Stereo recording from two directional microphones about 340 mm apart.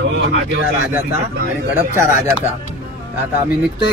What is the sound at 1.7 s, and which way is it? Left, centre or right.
Speech, left.